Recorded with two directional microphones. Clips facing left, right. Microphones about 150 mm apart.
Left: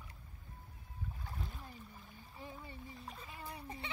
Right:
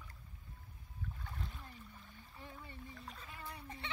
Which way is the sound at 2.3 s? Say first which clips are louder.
Left 3 dB; 10° left (ahead or behind).